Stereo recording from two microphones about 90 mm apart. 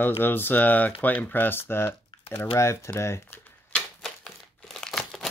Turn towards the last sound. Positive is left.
turn(degrees=5)  # may be behind; listen again after turning